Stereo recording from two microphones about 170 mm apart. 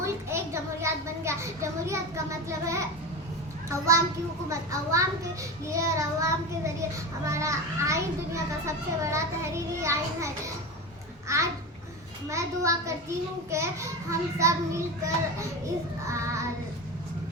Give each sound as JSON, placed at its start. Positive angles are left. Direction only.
{"t": 0.0, "sound": "a sound", "side_deg": -15}
{"t": 3.7, "sound": "a child's voice", "side_deg": -15}
{"t": 5.7, "sound": "child singing", "side_deg": -20}
{"t": 7.3, "sound": "a child's voice", "side_deg": -15}